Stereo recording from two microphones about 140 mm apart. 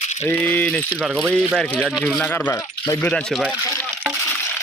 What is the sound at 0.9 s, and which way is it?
Speech, 5° right (ahead or behind).